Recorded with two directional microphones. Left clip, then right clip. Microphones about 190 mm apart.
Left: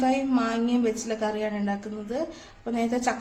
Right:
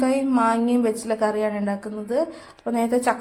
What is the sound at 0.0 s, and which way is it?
Speech, 20° right (ahead or behind).